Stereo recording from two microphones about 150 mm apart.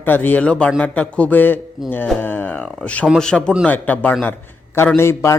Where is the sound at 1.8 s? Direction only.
5° right (ahead or behind).